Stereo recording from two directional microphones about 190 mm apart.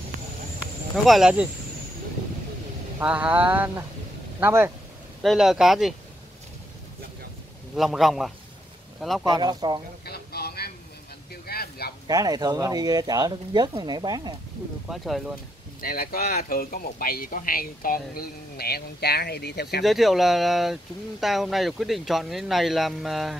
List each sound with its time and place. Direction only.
1.0 s speech: centre (ahead or behind)
3.0 s a sound: 5° right (ahead or behind)
5.2 s speech: centre (ahead or behind)
7.7 s speech: centre (ahead or behind)
9.2 s speech: 20° right (ahead or behind)
10.0 s a sound: 55° left (ahead or behind)
12.1 s speech: 20° right (ahead or behind)
14.9 s speech: centre (ahead or behind)
15.8 s speech: 50° left (ahead or behind)
19.8 s speech: centre (ahead or behind)